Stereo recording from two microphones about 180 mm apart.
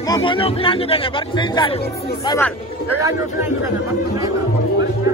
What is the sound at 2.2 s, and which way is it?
Speech, 15° left (ahead or behind).